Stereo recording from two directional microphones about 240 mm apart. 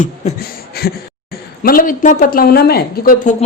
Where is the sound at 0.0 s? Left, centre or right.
Left.